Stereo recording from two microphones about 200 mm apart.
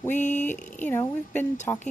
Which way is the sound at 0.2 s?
35° left (ahead or behind).